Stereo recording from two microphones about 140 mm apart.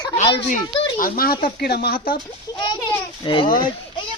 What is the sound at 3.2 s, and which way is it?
Speech, 35° left (ahead or behind).